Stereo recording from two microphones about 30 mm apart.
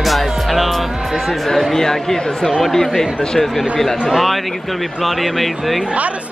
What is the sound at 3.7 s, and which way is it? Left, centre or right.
Speech, centre.